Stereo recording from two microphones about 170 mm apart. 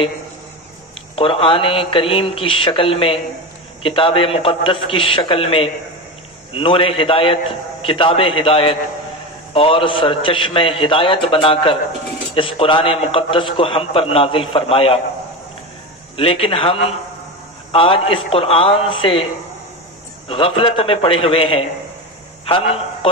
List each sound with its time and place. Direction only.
1.1 s a man's voice: 30° left (ahead or behind)
16.2 s a man's voice: 35° left (ahead or behind)
20.2 s a man's voice: 35° left (ahead or behind)